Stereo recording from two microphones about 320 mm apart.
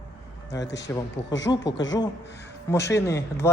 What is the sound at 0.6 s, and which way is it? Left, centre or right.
Speech, left.